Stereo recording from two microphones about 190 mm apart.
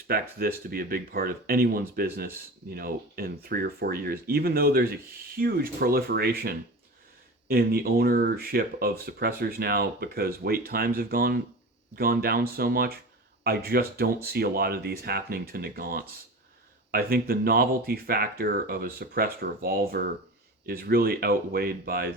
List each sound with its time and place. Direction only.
0.1 s speech: 50° right (ahead or behind)